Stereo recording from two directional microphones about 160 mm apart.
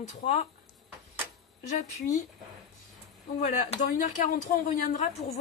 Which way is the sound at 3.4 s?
50° left (ahead or behind).